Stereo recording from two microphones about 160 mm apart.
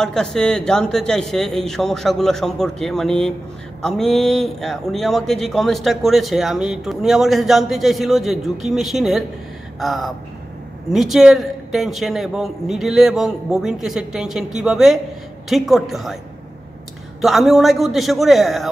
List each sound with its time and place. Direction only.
0.0 s speech: 5° left (ahead or behind)
17.2 s speech: centre (ahead or behind)